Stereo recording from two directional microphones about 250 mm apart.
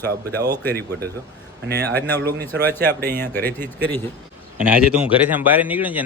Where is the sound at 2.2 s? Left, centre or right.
Right.